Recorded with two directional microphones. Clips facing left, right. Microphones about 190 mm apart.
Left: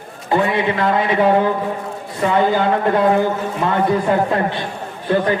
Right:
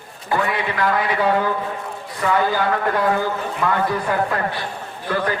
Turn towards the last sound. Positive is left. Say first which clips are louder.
# left 5 dB
turn(degrees=25)  # may be behind; listen again after turning